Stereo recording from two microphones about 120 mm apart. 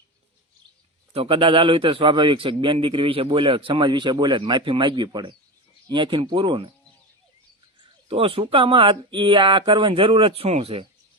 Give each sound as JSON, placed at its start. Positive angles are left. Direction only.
{"t": 1.1, "sound": "a man's voice", "side_deg": -50}
{"t": 8.0, "sound": "a man's voice", "side_deg": -50}